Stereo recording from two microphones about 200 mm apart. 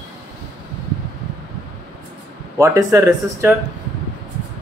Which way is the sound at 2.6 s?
15° right (ahead or behind).